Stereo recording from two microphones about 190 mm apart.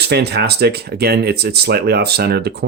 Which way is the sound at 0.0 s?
60° right (ahead or behind).